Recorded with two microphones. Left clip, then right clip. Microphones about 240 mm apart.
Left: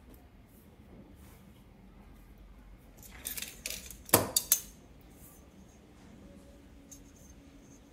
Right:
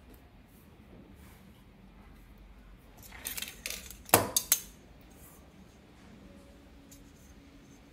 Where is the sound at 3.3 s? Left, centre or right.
Right.